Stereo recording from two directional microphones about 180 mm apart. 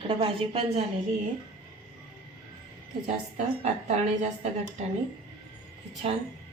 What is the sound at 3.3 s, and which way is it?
Speech, 40° right (ahead or behind).